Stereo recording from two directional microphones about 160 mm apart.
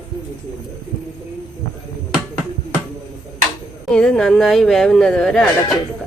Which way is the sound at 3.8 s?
5° left (ahead or behind).